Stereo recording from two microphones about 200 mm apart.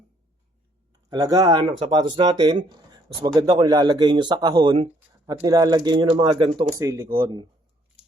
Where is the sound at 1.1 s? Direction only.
20° right (ahead or behind).